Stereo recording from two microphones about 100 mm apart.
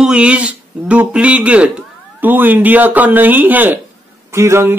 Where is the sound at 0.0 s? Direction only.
10° right (ahead or behind).